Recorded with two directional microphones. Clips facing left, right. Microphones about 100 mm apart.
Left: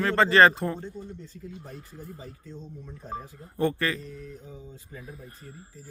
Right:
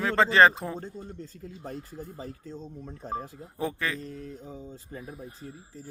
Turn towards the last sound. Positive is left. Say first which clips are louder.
# right 3 dB
turn(degrees=-35)  # may be behind; listen again after turning